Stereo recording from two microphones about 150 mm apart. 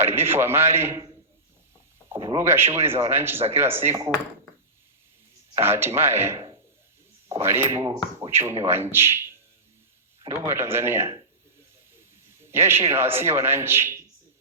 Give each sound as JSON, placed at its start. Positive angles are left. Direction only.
{"t": 0.0, "sound": "a man's voice", "side_deg": -15}
{"t": 2.4, "sound": "a man's voice", "side_deg": -15}
{"t": 5.5, "sound": "a man's voice", "side_deg": -15}
{"t": 10.2, "sound": "a man's voice", "side_deg": -20}
{"t": 11.9, "sound": "a sound", "side_deg": -15}
{"t": 12.9, "sound": "a man's voice", "side_deg": -15}